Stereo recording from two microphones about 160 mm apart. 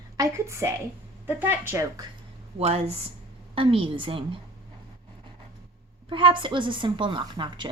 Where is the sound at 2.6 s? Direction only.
40° right (ahead or behind).